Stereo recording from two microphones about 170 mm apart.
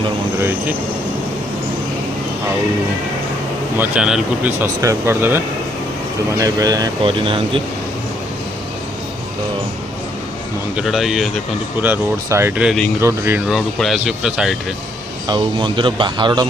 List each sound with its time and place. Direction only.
0.3 s speech: 15° right (ahead or behind)
3.8 s speech: 5° right (ahead or behind)
4.6 s speech: 15° right (ahead or behind)
6.4 s speech: 20° right (ahead or behind)
10.8 s speech: centre (ahead or behind)
11.8 s speech: 15° right (ahead or behind)
13.5 s speech: centre (ahead or behind)
15.3 s speech: 30° right (ahead or behind)